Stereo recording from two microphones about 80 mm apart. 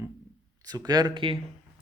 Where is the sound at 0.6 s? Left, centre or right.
Right.